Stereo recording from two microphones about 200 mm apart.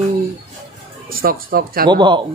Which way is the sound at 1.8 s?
25° right (ahead or behind).